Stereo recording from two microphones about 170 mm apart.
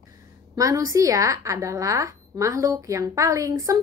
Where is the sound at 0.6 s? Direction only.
20° right (ahead or behind).